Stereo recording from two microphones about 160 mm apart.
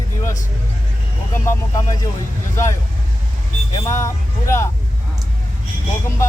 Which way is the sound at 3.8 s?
20° left (ahead or behind).